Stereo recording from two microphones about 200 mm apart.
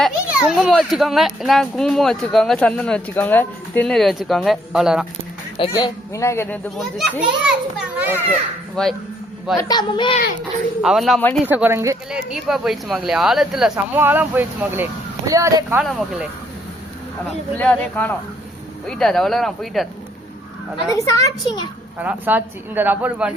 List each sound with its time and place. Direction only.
0.0 s a child's voice: 5° right (ahead or behind)
5.5 s speech: 20° left (ahead or behind)
6.7 s a child's voice: centre (ahead or behind)
8.3 s a child's voice: 5° left (ahead or behind)
9.6 s a woman's voice: 20° left (ahead or behind)
10.8 s a child's voice: centre (ahead or behind)
11.4 s speech: 10° right (ahead or behind)
12.1 s a child's voice: centre (ahead or behind)
15.8 s a child's voice: centre (ahead or behind)
17.6 s a child's voice: 10° left (ahead or behind)
20.9 s a woman's voice: 20° left (ahead or behind)
22.0 s speech: 10° right (ahead or behind)